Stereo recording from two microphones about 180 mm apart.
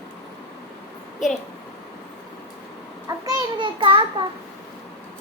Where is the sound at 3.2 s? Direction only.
20° right (ahead or behind).